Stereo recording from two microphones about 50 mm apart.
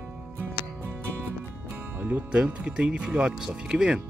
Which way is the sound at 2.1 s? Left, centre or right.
Right.